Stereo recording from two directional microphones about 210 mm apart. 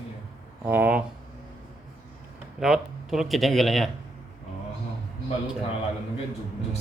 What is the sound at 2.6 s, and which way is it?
Speech, centre (ahead or behind).